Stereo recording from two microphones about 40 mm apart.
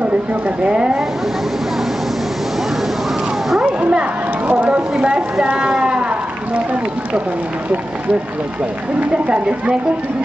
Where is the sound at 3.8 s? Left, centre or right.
Right.